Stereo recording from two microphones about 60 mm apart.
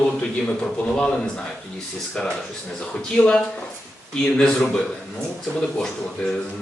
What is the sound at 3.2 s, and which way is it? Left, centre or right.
Speech, left.